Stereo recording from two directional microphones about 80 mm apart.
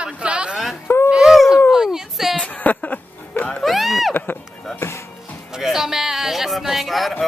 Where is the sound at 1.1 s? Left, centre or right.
Centre.